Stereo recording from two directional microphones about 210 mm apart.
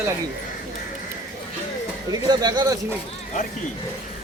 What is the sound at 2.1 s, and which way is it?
Speech, 20° right (ahead or behind).